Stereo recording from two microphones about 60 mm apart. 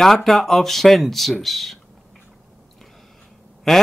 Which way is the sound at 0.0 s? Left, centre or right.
Centre.